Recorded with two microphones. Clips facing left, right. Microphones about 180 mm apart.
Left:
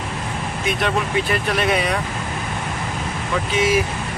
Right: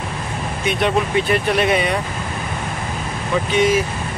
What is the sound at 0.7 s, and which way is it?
Speech, centre (ahead or behind).